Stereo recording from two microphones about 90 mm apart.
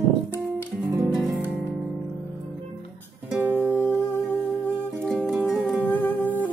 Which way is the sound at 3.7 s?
25° left (ahead or behind).